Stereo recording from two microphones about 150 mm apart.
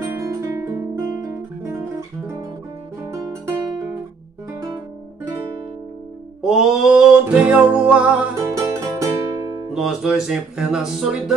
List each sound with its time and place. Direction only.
0.0 s music: 20° right (ahead or behind)
6.4 s music: 5° right (ahead or behind)
8.4 s music: 20° right (ahead or behind)
9.8 s speech: 5° right (ahead or behind)